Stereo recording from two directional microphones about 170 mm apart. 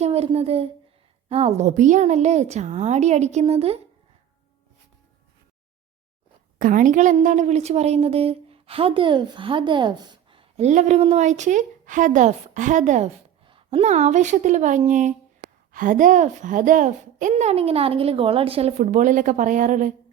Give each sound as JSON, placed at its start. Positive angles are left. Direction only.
{"t": 0.0, "sound": "a child's voice", "side_deg": -35}
{"t": 6.6, "sound": "a woman's voice", "side_deg": -50}
{"t": 13.4, "sound": "a child's voice", "side_deg": -30}